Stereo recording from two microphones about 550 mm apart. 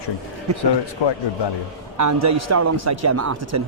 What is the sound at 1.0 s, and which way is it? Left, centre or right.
Speech, left.